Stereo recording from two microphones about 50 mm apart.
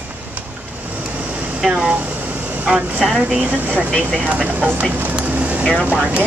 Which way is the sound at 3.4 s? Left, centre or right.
Right.